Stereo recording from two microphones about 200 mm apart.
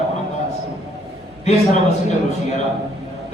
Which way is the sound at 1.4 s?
35° left (ahead or behind).